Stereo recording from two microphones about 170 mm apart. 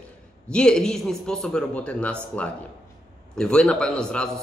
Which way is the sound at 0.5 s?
5° left (ahead or behind).